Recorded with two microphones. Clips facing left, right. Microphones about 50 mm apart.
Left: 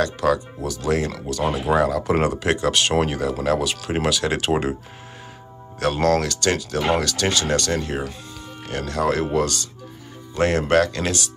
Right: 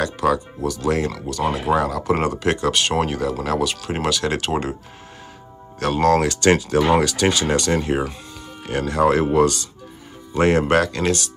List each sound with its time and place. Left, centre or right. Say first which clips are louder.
0.0 s speech: even; centre
5.8 s speech: right 2 dB; centre
6.1 s speech: right 5 dB; right
6.9 s speech: right 1 dB; centre